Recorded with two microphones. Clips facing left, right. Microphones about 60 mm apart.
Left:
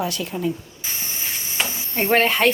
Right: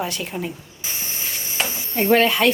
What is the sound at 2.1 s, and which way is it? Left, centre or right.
Speech, left.